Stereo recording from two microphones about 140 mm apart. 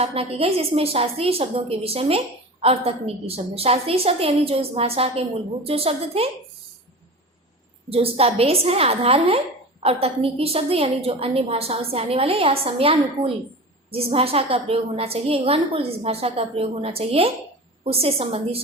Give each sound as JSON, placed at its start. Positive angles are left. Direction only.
{"t": 0.0, "sound": "a woman's voice", "side_deg": -45}
{"t": 7.9, "sound": "a woman's voice", "side_deg": -45}